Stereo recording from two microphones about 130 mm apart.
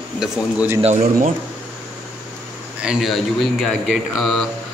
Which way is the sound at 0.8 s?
80° right.